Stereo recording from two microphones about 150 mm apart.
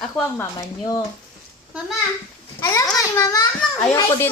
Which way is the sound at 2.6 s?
20° left (ahead or behind).